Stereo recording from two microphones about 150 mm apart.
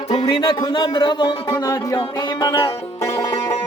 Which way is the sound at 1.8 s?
30° left (ahead or behind).